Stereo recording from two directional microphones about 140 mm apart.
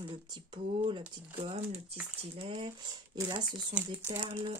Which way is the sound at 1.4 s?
45° right (ahead or behind).